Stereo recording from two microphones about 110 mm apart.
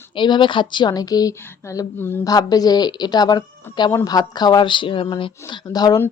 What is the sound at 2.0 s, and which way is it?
Speech, 20° left (ahead or behind).